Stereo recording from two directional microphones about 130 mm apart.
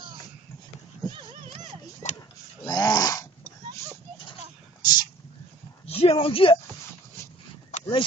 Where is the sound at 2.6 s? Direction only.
30° left (ahead or behind).